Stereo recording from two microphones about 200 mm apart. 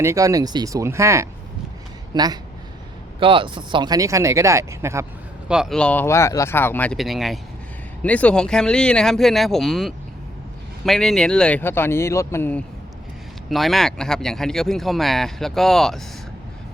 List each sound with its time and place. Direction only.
0.0 s speech: 15° right (ahead or behind)
5.5 s speech: centre (ahead or behind)